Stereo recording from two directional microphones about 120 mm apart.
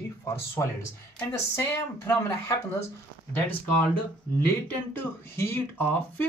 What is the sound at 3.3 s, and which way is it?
Speech, 15° left (ahead or behind).